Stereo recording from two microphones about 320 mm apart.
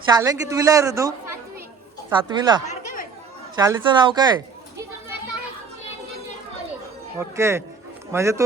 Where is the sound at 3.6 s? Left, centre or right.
Centre.